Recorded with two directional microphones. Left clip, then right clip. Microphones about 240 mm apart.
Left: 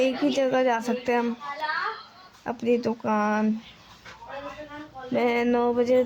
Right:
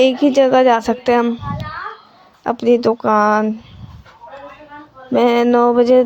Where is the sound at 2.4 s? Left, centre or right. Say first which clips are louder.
Right 11 dB; right.